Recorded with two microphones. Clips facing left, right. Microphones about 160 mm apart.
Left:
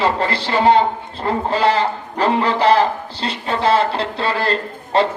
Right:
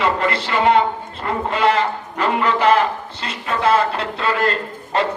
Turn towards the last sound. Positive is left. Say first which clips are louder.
# left 3 dB
turn(degrees=30)  # may be behind; listen again after turning